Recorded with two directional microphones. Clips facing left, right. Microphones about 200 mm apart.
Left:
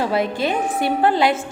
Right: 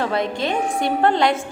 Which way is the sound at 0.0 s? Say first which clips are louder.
Left 2 dB; 5° left (ahead or behind).